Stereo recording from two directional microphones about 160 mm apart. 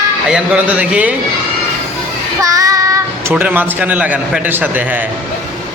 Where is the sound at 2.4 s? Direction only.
20° right (ahead or behind).